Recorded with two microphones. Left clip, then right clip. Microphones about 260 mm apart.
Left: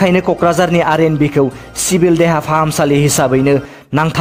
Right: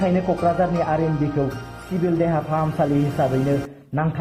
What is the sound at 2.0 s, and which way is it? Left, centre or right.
A man's voice, left.